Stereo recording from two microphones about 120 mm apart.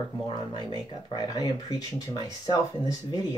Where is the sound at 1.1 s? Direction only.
30° left (ahead or behind).